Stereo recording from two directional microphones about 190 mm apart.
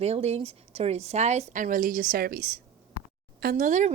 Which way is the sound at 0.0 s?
35° right (ahead or behind).